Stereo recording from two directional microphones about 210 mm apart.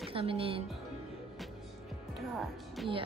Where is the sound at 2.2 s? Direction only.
Centre (ahead or behind).